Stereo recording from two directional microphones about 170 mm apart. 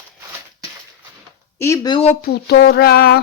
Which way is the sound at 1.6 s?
20° left (ahead or behind).